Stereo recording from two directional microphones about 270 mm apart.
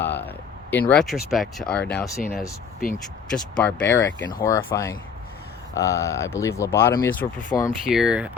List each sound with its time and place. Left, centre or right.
0.0 s speech: centre
2.8 s speech: left
3.6 s speech: centre
7.9 s speech: centre